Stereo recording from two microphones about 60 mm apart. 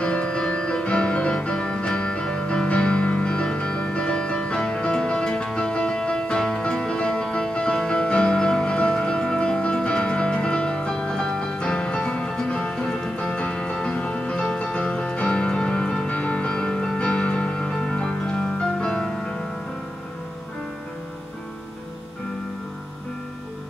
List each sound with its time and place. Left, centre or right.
0.0 s music: centre